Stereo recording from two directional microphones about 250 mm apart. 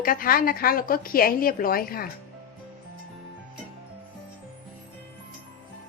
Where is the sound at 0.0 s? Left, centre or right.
Left.